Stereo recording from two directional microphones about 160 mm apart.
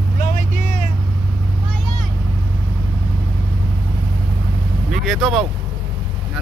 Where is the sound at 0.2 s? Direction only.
55° left (ahead or behind).